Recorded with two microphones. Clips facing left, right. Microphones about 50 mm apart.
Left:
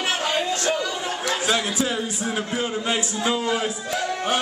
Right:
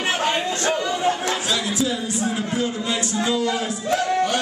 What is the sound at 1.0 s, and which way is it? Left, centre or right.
Chatter, right.